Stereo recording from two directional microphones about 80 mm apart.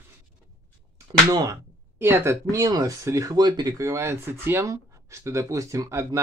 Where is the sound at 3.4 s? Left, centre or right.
Right.